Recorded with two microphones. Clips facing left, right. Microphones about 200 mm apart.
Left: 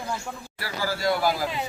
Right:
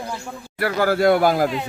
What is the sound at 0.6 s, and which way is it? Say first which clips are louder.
Speech: right 10 dB; 60° right (ahead or behind).